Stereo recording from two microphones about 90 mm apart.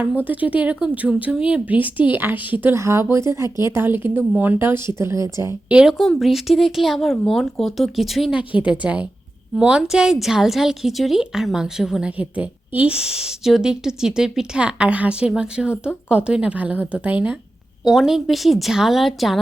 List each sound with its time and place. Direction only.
0.0 s a woman's voice: 20° right (ahead or behind)
2.7 s speech: 30° right (ahead or behind)
5.6 s speech: 10° right (ahead or behind)
8.6 s a woman's voice: 15° right (ahead or behind)
17.8 s speech: 5° right (ahead or behind)